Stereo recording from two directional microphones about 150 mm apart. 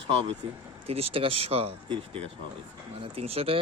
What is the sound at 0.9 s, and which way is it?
Speech, 40° right (ahead or behind).